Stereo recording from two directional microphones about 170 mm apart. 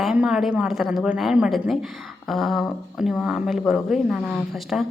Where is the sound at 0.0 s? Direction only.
5° right (ahead or behind).